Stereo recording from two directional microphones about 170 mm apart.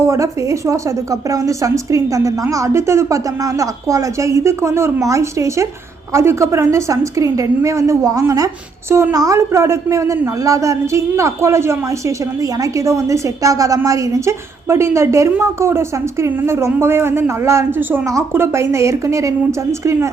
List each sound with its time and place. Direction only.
0.0 s a woman's voice: 15° right (ahead or behind)